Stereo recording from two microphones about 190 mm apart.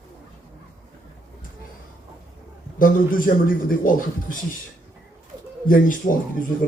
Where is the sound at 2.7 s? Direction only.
45° left (ahead or behind).